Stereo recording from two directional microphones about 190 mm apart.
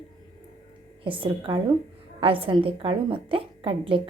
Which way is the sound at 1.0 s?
25° right (ahead or behind).